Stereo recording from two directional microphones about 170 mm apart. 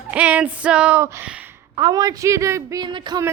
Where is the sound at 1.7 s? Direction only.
25° right (ahead or behind).